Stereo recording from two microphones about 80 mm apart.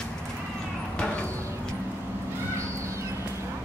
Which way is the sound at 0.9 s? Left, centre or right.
Centre.